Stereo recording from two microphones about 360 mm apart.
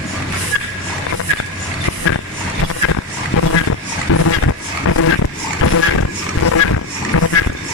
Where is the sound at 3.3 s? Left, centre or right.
Left.